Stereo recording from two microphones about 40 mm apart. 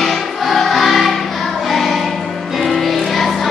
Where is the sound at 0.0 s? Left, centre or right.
Centre.